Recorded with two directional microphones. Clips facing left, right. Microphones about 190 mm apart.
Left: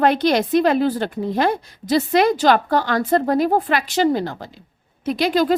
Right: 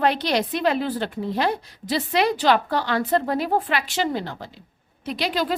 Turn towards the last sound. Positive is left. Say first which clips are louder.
# left 7 dB
turn(degrees=45)  # may be behind; listen again after turning